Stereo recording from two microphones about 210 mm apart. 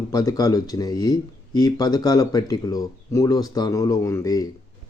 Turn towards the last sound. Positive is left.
turn(degrees=15)  # may be behind; listen again after turning